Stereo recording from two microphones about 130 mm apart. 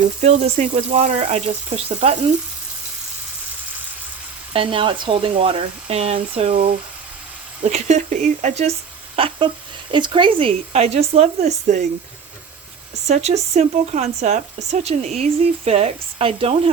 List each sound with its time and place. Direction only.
0.2 s speech: 55° right (ahead or behind)
4.5 s speech: 45° right (ahead or behind)
7.6 s speech: 65° right (ahead or behind)
9.1 s speech: 45° right (ahead or behind); by 11.9 s 60° right (ahead or behind)
13.1 s speech: 55° right (ahead or behind)